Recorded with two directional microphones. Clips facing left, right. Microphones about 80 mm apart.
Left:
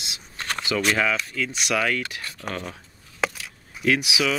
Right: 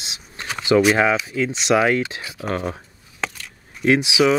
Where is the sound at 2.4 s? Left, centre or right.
Right.